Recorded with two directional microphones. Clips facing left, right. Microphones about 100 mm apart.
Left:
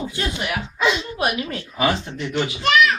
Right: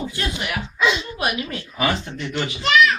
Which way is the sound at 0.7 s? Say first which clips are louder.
Right 1 dB; 30° left (ahead or behind).